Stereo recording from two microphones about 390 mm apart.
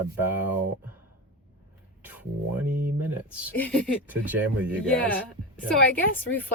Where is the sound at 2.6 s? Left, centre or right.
Right.